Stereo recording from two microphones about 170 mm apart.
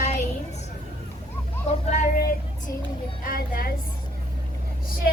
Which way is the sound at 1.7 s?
45° left (ahead or behind).